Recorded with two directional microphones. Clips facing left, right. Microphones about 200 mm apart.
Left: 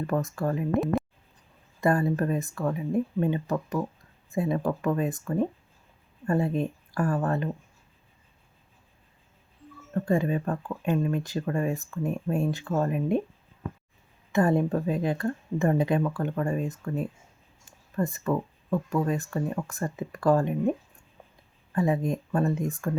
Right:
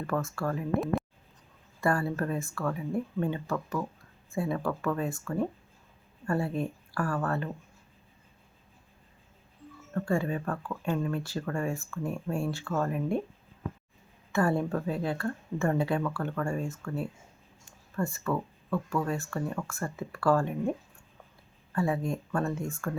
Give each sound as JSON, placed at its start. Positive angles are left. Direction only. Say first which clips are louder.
{"t": 0.1, "sound": "speech", "louder": "left 2 dB", "side_deg": 20}
{"t": 1.8, "sound": "speech", "louder": "left 4 dB", "side_deg": 20}
{"t": 9.9, "sound": "speech", "louder": "left 4 dB", "side_deg": 20}
{"t": 14.3, "sound": "speech", "louder": "left 4 dB", "side_deg": 20}